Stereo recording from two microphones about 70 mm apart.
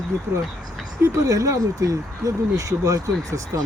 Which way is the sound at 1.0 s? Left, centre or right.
Right.